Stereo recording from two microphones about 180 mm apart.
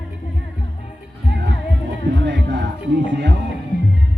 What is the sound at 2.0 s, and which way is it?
Music, 75° right (ahead or behind).